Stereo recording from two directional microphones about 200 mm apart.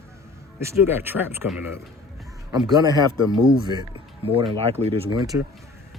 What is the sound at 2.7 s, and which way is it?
Speech, 20° right (ahead or behind).